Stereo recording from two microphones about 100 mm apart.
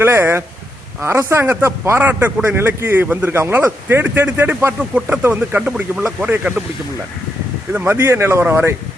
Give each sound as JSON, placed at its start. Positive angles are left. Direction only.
{"t": 0.0, "sound": "speech", "side_deg": -25}
{"t": 4.8, "sound": "speech", "side_deg": -10}
{"t": 7.7, "sound": "speech", "side_deg": -20}